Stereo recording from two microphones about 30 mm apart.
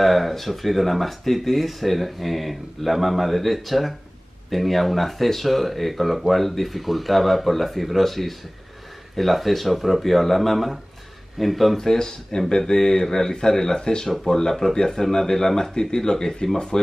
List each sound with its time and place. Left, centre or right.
0.0 s speech: centre
11.7 s a man's voice: centre
14.0 s a man's voice: centre